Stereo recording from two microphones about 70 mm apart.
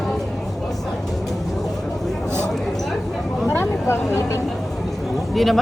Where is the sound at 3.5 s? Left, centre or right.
Left.